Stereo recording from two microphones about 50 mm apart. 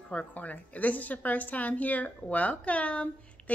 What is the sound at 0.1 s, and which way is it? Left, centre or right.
Speech, left.